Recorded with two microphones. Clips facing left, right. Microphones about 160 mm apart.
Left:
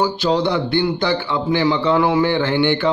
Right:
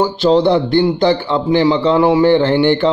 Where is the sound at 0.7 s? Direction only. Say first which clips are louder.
Right 6 dB; 45° right (ahead or behind).